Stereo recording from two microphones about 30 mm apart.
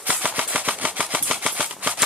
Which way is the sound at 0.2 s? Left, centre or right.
Right.